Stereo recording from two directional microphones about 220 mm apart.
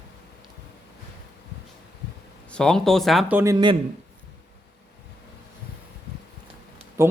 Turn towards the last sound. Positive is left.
turn(degrees=-10)  # may be behind; listen again after turning